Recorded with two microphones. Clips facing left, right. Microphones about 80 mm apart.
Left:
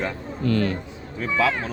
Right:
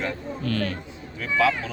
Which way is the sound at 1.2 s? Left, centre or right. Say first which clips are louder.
Even; left.